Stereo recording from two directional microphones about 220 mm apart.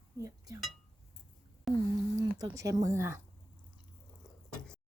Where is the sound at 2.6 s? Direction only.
15° right (ahead or behind).